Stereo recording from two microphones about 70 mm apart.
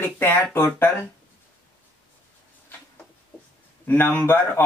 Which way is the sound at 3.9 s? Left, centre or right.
Left.